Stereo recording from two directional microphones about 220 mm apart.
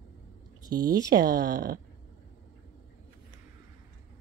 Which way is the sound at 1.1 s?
40° right (ahead or behind).